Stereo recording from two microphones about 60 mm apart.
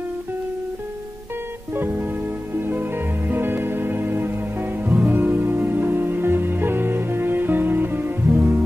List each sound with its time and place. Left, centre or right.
1.7 s music: right